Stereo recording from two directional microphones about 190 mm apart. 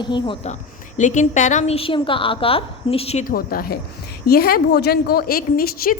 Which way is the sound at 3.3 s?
50° left (ahead or behind).